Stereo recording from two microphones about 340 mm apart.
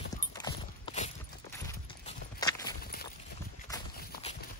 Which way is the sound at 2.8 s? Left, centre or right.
Left.